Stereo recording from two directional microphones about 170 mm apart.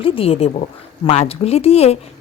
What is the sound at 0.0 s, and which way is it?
Speech, 35° left (ahead or behind).